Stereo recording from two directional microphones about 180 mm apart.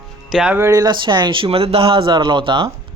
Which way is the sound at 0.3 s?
5° right (ahead or behind).